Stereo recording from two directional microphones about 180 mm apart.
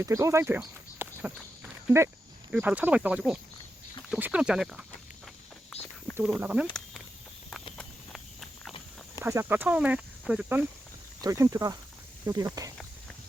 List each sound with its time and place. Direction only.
0.0 s speech: 15° right (ahead or behind)
2.5 s speech: 10° right (ahead or behind)
5.7 s a sound: 10° left (ahead or behind)
6.4 s speech: 10° right (ahead or behind)
7.8 s walk: centre (ahead or behind)
9.2 s speech: 10° right (ahead or behind)
11.2 s speech: 20° right (ahead or behind)